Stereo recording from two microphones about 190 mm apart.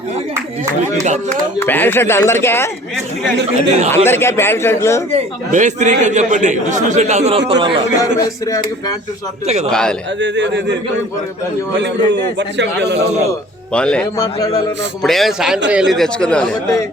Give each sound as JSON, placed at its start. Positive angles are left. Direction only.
{"t": 1.0, "sound": "a man's voice", "side_deg": -40}
{"t": 1.6, "sound": "a man's voice", "side_deg": 10}
{"t": 3.9, "sound": "a man's voice", "side_deg": 10}
{"t": 5.1, "sound": "a man's voice", "side_deg": -40}
{"t": 8.2, "sound": "a man's voice", "side_deg": 15}
{"t": 9.6, "sound": "speech", "side_deg": 5}
{"t": 10.2, "sound": "a man's voice", "side_deg": -70}
{"t": 11.8, "sound": "a man's voice", "side_deg": -65}
{"t": 13.7, "sound": "speech", "side_deg": 5}
{"t": 14.2, "sound": "a man's voice", "side_deg": 20}
{"t": 15.0, "sound": "speech", "side_deg": 0}